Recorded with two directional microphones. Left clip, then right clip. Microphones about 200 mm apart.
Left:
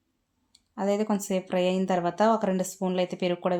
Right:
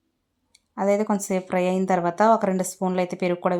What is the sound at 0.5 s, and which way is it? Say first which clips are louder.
Speech: right 5 dB; 20° right (ahead or behind).